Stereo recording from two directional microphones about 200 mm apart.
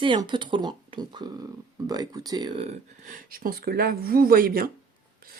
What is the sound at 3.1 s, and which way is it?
Speech, 45° right (ahead or behind).